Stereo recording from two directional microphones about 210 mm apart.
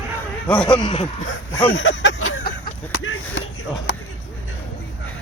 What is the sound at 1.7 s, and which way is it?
Speech, 65° left (ahead or behind).